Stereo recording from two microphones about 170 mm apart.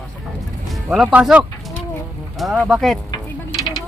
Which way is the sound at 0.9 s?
5° right (ahead or behind).